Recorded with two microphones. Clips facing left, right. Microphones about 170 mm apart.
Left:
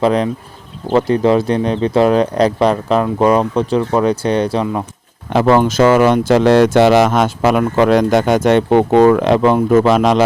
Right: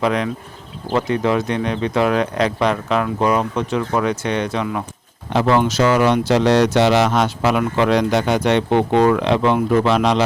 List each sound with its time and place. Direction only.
0.0 s speech: 35° left (ahead or behind)
5.3 s speech: 50° left (ahead or behind)